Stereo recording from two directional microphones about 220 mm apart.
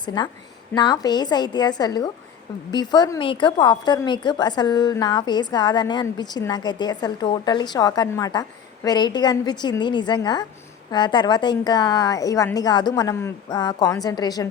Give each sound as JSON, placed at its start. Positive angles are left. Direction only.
{"t": 0.0, "sound": "a woman's voice", "side_deg": 20}